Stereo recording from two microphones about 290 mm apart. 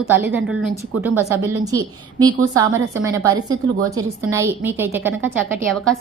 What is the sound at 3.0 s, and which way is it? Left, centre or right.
A woman's voice, centre.